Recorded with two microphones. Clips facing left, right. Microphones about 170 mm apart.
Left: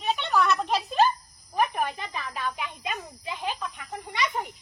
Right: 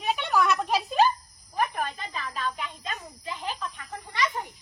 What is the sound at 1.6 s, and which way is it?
Snake, 15° left (ahead or behind).